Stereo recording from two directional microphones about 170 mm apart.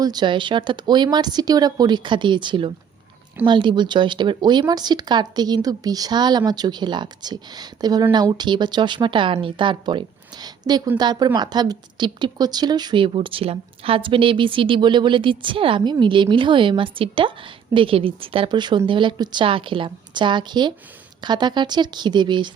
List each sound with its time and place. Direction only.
0.0 s a woman's voice: 25° right (ahead or behind)